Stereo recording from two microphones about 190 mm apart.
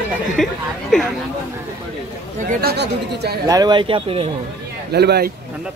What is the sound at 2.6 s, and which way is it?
Speech, 60° right (ahead or behind).